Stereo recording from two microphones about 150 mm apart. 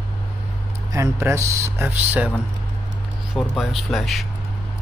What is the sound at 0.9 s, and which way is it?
Speech, 20° right (ahead or behind).